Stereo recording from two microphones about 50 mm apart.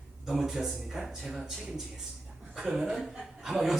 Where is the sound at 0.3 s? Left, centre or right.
Centre.